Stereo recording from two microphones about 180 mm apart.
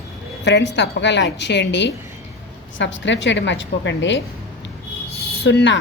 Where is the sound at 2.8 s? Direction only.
90° left.